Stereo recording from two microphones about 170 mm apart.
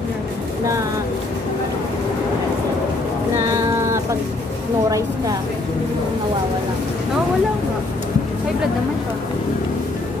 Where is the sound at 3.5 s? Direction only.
20° right (ahead or behind).